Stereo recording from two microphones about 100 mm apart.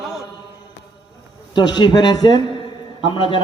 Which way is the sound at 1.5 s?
50° left (ahead or behind).